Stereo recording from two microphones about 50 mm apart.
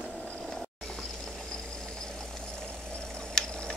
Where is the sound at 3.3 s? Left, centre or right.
Centre.